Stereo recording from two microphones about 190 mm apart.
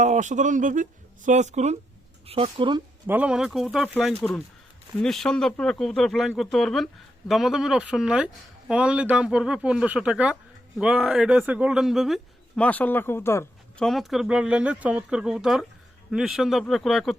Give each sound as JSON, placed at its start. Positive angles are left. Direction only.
{"t": 0.0, "sound": "speech", "side_deg": -40}
{"t": 3.1, "sound": "speech", "side_deg": -5}
{"t": 13.8, "sound": "speech", "side_deg": 0}